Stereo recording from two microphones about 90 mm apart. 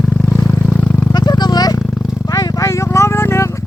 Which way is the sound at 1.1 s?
50° left (ahead or behind).